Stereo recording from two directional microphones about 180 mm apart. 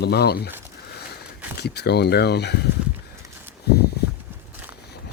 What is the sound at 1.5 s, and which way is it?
Speech, 65° left (ahead or behind).